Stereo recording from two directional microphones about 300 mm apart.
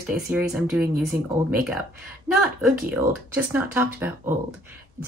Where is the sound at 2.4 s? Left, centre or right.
Centre.